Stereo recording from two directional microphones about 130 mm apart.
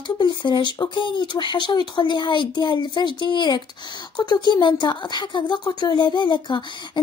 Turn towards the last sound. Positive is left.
turn(degrees=35)  # may be behind; listen again after turning